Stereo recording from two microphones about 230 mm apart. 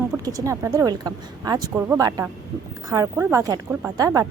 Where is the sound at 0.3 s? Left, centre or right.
Centre.